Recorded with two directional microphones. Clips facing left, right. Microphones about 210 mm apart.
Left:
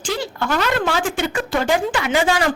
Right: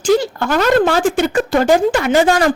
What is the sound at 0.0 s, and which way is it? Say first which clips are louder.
Speech: right 10 dB; 45° right (ahead or behind).